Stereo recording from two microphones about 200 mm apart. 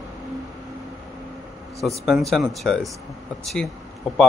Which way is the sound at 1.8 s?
Centre (ahead or behind).